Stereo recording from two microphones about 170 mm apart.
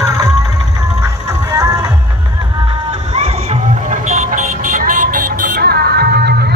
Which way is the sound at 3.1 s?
40° right (ahead or behind).